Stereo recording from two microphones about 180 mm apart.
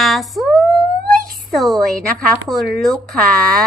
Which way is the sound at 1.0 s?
55° right (ahead or behind).